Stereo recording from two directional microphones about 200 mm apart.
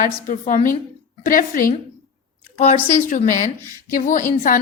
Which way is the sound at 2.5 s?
35° left (ahead or behind).